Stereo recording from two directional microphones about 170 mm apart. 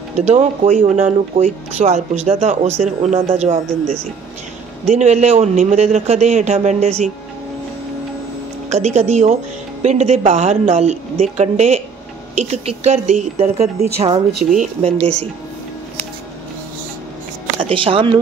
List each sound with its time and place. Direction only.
0.2 s speech: 40° right (ahead or behind)
4.8 s a man's voice: 40° right (ahead or behind)
8.6 s a man's voice: 40° right (ahead or behind)
17.6 s speech: 30° right (ahead or behind)